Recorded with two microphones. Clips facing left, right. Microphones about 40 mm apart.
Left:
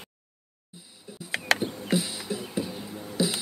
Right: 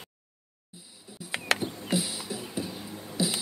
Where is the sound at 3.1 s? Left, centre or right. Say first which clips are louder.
Left 2 dB; centre.